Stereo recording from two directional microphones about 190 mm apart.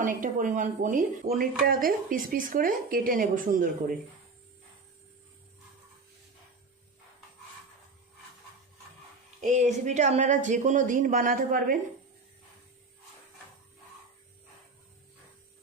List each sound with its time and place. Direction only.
0.0 s speech: 45° right (ahead or behind)
9.4 s speech: 40° right (ahead or behind)